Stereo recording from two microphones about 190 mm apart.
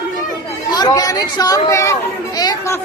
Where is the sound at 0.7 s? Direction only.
20° left (ahead or behind).